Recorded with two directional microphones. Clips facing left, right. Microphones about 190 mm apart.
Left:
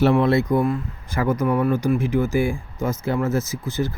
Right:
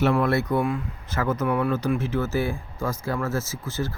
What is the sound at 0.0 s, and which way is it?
Speech, 25° left (ahead or behind).